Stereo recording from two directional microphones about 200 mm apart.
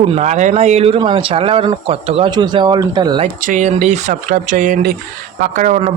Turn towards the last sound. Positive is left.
turn(degrees=-40)  # may be behind; listen again after turning